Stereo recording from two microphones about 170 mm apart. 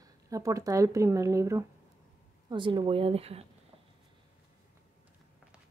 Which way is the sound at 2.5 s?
30° right (ahead or behind).